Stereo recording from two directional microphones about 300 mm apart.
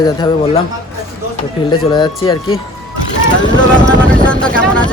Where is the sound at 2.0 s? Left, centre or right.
Centre.